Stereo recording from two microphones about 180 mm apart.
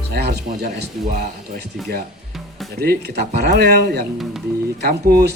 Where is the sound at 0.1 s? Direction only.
60° right (ahead or behind).